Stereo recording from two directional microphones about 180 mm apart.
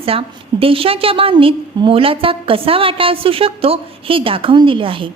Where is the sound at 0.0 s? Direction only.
30° right (ahead or behind).